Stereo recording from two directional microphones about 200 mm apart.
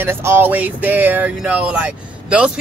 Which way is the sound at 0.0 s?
10° right (ahead or behind).